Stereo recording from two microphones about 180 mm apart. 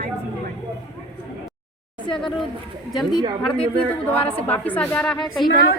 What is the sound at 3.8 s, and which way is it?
A woman's voice, 10° left (ahead or behind).